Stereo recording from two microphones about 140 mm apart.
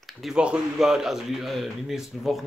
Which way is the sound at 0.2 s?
5° right (ahead or behind).